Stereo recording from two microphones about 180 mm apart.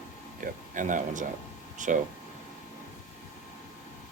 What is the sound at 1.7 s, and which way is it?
Air conditioning, 45° right (ahead or behind).